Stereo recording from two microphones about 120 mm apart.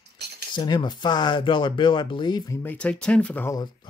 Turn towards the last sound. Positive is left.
turn(degrees=35)  # may be behind; listen again after turning